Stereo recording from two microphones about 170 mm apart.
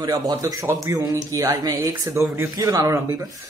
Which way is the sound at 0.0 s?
20° right (ahead or behind).